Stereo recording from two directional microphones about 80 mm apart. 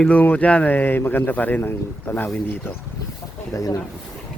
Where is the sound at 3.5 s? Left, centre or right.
Left.